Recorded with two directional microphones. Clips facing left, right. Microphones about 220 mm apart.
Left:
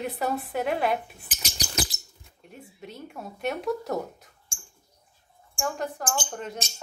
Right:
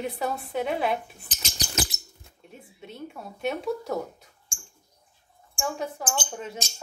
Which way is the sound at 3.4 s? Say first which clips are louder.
Even; centre (ahead or behind).